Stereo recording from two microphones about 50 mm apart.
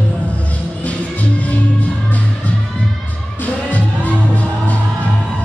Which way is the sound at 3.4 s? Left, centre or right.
Left.